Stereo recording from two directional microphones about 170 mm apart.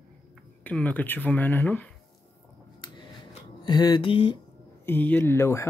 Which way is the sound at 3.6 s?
25° left (ahead or behind).